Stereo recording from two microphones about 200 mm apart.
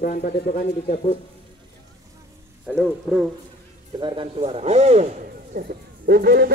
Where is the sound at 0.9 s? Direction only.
30° left (ahead or behind).